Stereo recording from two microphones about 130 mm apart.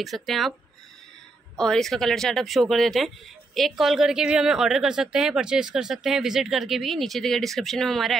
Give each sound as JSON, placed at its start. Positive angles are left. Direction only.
{"t": 0.0, "sound": "a woman's voice", "side_deg": 0}
{"t": 1.6, "sound": "a woman's voice", "side_deg": 5}